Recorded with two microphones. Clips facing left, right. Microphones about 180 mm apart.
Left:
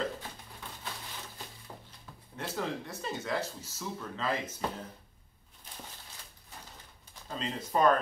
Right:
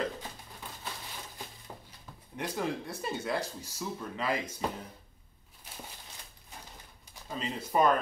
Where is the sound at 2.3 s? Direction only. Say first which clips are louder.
Right 2 dB; 15° right (ahead or behind).